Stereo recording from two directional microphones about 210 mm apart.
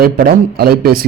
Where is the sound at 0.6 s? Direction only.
45° right (ahead or behind).